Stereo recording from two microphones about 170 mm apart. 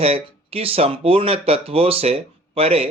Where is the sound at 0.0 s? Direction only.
35° right (ahead or behind).